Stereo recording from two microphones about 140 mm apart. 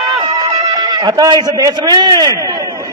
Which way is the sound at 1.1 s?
30° right (ahead or behind).